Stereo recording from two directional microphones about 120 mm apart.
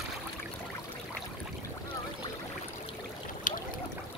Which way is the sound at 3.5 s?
90° left.